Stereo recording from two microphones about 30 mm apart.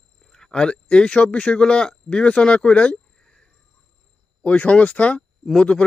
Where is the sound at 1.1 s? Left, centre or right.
Left.